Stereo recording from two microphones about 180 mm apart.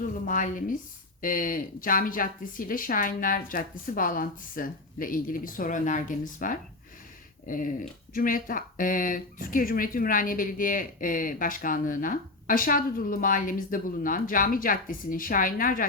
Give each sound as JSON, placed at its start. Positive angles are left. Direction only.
{"t": 0.0, "sound": "speech", "side_deg": 50}